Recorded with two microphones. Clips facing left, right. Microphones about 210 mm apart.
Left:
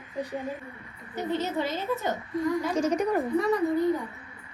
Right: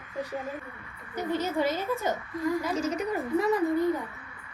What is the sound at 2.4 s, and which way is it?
A woman's voice, centre (ahead or behind).